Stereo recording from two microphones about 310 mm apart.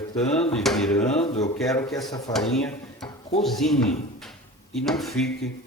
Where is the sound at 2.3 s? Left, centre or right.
Centre.